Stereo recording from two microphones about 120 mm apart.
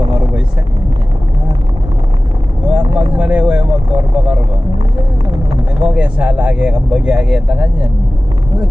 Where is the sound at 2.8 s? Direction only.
40° right (ahead or behind).